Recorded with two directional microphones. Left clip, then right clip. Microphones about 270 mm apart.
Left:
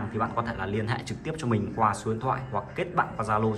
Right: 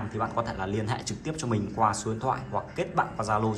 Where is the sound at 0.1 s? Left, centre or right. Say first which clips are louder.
Left 1 dB; centre.